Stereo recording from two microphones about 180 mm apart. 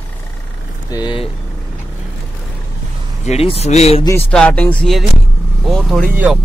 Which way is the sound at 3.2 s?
35° left (ahead or behind).